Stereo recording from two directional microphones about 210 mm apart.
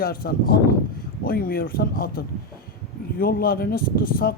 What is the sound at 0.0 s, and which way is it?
Speech, 45° left (ahead or behind).